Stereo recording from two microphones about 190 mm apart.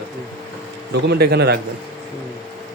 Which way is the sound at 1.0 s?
60° right (ahead or behind).